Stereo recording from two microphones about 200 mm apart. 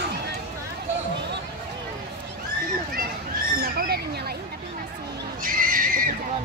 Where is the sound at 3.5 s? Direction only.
50° right (ahead or behind).